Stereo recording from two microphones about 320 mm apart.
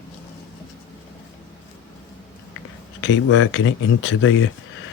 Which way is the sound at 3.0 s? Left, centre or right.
Left.